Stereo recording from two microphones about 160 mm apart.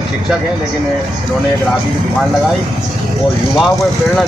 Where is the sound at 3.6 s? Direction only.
Centre (ahead or behind).